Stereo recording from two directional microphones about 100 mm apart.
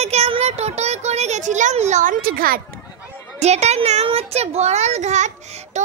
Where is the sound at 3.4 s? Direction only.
90° right.